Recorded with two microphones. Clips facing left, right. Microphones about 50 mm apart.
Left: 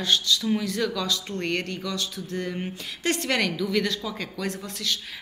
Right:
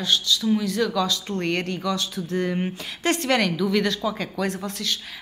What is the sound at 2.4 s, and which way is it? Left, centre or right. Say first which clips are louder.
Speech: right 5 dB; right.